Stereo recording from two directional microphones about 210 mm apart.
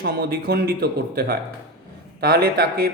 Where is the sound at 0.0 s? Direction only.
45° right (ahead or behind).